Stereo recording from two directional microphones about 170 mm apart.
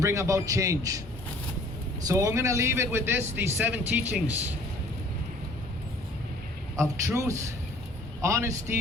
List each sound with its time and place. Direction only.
0.0 s a man's voice: 20° right (ahead or behind)
2.0 s speech: 20° right (ahead or behind)
6.7 s speech: 15° right (ahead or behind)